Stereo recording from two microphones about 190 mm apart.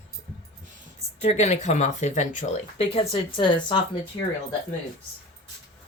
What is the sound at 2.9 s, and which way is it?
Speech, 30° left (ahead or behind).